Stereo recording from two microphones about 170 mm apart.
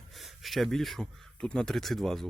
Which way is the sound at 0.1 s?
Centre (ahead or behind).